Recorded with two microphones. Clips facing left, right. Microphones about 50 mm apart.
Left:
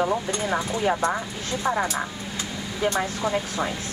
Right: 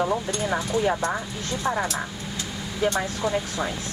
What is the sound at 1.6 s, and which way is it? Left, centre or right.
Speech, centre.